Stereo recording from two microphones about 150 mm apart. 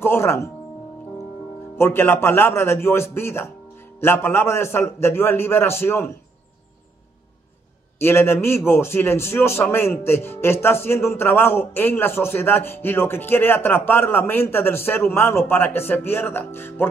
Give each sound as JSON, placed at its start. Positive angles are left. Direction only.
{"t": 0.0, "sound": "a man's voice", "side_deg": 15}
{"t": 1.8, "sound": "a man's voice", "side_deg": 15}
{"t": 8.0, "sound": "a man's voice", "side_deg": 15}